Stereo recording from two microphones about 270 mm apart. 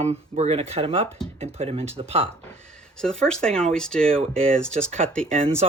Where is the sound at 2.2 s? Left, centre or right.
Centre.